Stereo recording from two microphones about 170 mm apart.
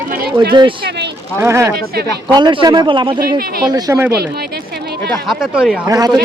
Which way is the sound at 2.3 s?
25° right (ahead or behind).